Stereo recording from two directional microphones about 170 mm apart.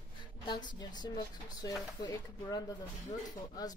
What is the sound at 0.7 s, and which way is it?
Speech, 25° left (ahead or behind).